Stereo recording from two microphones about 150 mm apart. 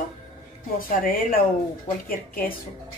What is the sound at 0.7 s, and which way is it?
Speech, 70° left (ahead or behind).